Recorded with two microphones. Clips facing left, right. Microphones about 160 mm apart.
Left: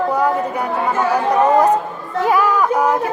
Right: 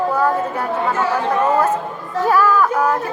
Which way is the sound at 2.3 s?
15° left (ahead or behind).